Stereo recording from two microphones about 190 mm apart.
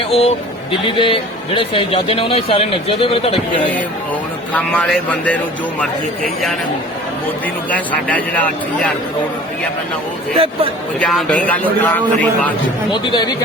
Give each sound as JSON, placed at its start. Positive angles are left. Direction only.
{"t": 0.1, "sound": "a man's voice", "side_deg": 30}
{"t": 4.5, "sound": "a man's voice", "side_deg": 5}
{"t": 7.7, "sound": "a man's voice", "side_deg": 10}
{"t": 10.3, "sound": "speech", "side_deg": -30}
{"t": 11.0, "sound": "a man's voice", "side_deg": 5}
{"t": 12.9, "sound": "a man's voice", "side_deg": 25}